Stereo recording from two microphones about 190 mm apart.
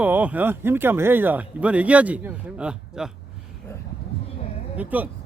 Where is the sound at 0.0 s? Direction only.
10° right (ahead or behind).